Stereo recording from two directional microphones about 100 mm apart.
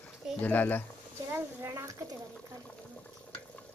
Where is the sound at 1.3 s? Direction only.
30° right (ahead or behind).